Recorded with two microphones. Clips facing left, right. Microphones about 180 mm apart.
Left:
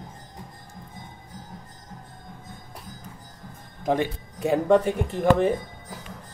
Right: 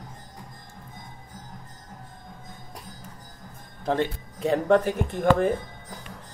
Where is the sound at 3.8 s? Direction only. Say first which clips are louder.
Left 1 dB; 10° left (ahead or behind).